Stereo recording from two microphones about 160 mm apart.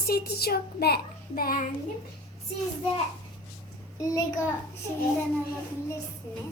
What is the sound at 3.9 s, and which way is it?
Speech, 20° left (ahead or behind).